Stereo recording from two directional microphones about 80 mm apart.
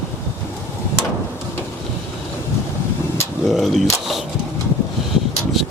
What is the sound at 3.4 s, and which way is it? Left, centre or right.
Speech, centre.